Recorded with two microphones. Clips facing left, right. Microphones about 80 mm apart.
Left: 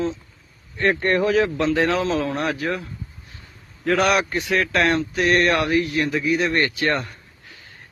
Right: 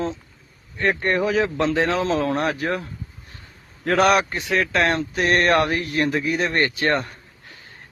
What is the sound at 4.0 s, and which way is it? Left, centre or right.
Speech, right.